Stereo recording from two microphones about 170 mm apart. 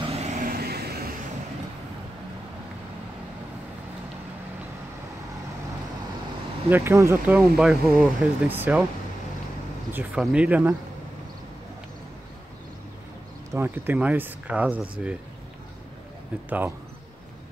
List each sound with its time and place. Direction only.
0.0 s vehicle: 40° right (ahead or behind)
0.5 s vehicle: 65° right (ahead or behind)
6.7 s speech: 15° right (ahead or behind)
9.9 s speech: 5° right (ahead or behind)
13.5 s speech: 15° right (ahead or behind)
16.4 s speech: 10° right (ahead or behind)